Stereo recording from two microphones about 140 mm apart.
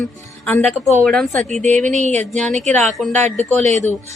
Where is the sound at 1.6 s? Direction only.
60° right (ahead or behind).